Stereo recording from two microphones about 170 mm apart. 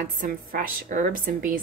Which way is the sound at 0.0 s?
50° right (ahead or behind).